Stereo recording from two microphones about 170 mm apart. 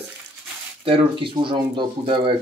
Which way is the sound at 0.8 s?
35° right (ahead or behind).